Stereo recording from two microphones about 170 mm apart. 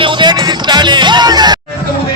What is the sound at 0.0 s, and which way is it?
Music, 25° right (ahead or behind).